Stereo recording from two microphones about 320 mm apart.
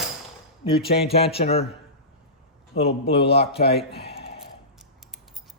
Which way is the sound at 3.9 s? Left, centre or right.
Left.